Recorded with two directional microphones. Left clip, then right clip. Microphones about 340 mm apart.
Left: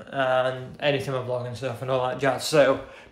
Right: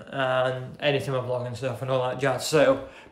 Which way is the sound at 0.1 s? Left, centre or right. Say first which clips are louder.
Left 1 dB; centre.